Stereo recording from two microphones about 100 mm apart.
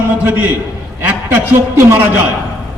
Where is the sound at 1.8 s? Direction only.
20° right (ahead or behind).